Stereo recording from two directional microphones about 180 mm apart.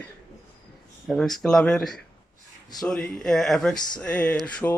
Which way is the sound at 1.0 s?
Centre (ahead or behind).